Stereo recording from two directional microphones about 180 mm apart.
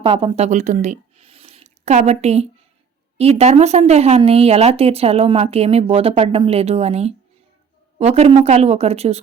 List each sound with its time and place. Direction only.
0.0 s speech: 30° right (ahead or behind)